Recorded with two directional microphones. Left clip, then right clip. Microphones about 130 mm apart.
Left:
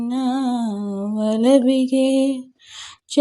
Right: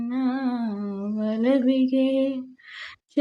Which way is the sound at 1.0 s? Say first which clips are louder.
Left 6 dB; 40° left (ahead or behind).